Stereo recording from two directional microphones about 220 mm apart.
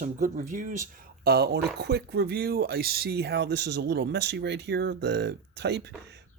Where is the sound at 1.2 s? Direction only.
45° right (ahead or behind).